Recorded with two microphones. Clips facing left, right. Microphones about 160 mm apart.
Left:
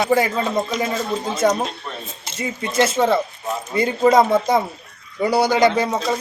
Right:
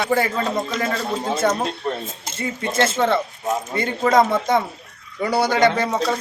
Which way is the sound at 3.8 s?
20° left (ahead or behind).